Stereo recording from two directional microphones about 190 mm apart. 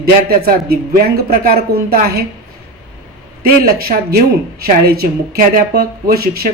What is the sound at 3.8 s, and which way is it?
Speech, 50° right (ahead or behind).